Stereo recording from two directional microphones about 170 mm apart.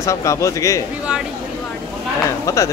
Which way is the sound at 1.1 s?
5° right (ahead or behind).